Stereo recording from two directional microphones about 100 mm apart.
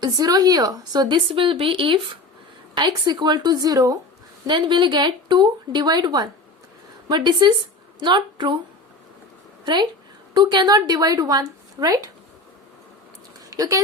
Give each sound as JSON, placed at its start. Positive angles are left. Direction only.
{"t": 0.0, "sound": "speech", "side_deg": -40}
{"t": 2.7, "sound": "speech", "side_deg": -45}
{"t": 4.4, "sound": "a woman's voice", "side_deg": -50}
{"t": 9.6, "sound": "speech", "side_deg": -50}
{"t": 13.5, "sound": "speech", "side_deg": -35}